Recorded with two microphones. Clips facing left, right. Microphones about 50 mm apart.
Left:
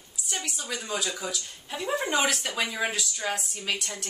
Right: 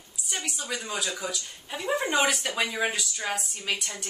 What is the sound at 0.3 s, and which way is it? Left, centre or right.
Speech, centre.